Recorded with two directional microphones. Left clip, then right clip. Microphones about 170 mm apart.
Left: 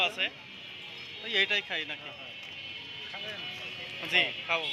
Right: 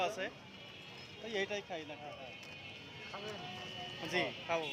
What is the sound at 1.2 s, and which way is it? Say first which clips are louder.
Speech: left 11 dB; 10° right (ahead or behind).